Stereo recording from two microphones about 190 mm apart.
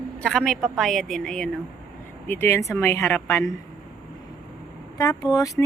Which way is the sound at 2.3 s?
15° left (ahead or behind).